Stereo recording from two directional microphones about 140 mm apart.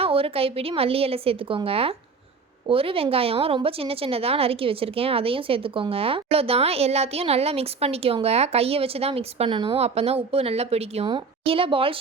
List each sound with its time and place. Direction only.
0.0 s a woman's voice: 40° right (ahead or behind)